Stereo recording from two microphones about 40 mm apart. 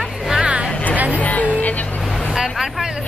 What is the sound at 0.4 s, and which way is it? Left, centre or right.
Music, right.